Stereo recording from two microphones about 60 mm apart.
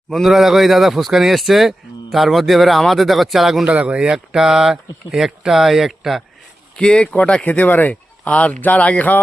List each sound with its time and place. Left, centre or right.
0.1 s speech: centre
3.7 s speech: centre
6.7 s speech: centre